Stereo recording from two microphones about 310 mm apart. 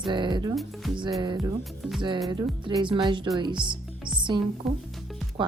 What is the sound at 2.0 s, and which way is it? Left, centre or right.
A woman's voice, centre.